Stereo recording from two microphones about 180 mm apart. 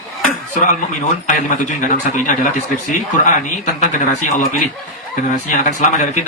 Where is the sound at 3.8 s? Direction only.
45° left (ahead or behind).